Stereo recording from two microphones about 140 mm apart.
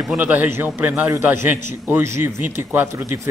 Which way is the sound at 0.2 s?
10° right (ahead or behind).